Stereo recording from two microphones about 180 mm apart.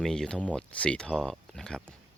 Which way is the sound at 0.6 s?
5° left (ahead or behind).